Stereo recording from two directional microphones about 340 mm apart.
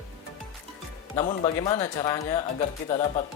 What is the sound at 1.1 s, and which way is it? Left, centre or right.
Speech, centre.